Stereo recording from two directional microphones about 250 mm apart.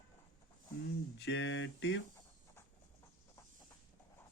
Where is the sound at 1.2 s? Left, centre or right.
Left.